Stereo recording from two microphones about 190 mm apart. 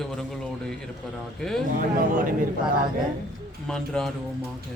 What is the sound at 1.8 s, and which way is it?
Speech, 45° right (ahead or behind).